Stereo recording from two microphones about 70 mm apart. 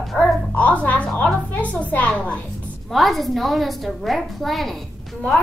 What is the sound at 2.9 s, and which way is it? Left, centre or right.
A woman's voice, centre.